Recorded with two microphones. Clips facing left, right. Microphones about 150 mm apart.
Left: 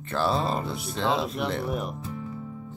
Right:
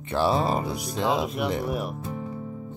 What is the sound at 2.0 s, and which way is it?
Music, 45° right (ahead or behind).